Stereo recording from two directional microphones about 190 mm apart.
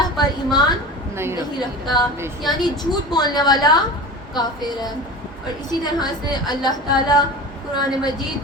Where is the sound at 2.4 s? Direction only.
20° left (ahead or behind).